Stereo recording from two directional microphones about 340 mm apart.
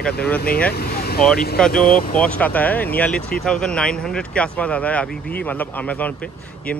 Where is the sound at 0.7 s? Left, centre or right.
Left.